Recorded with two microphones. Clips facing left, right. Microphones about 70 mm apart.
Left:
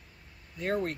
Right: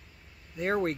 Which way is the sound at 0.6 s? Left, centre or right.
Right.